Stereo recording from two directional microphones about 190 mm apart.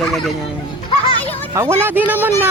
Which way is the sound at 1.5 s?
15° right (ahead or behind).